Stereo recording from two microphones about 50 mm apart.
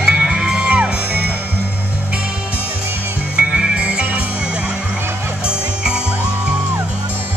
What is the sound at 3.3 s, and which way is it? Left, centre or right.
Music, centre.